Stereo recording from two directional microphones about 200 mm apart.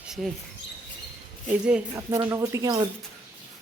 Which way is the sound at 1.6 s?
5° right (ahead or behind).